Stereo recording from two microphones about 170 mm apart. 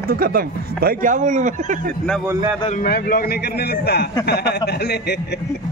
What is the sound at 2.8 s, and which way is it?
A man's voice, 60° left (ahead or behind).